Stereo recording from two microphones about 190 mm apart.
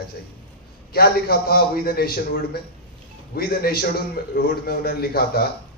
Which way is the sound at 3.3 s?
55° left (ahead or behind).